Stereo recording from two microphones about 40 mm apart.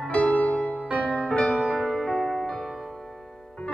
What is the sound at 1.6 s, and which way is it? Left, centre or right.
Music, centre.